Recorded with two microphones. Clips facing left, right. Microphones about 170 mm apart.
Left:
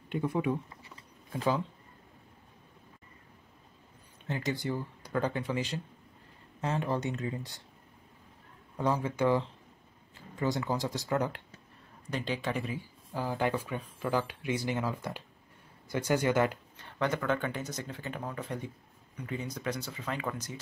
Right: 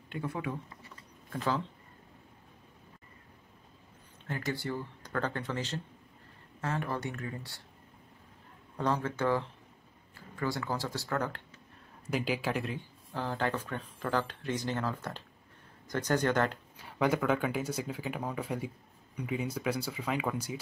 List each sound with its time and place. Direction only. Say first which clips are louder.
0.1 s speech: left 6 dB; 20° left (ahead or behind)
4.3 s speech: left 2 dB; 20° left (ahead or behind)
8.7 s speech: left 1 dB; 10° left (ahead or behind)
12.1 s speech: right 2 dB; 10° right (ahead or behind); by 16.5 s 10° left (ahead or behind)
16.7 s speech: right 3 dB; 10° right (ahead or behind)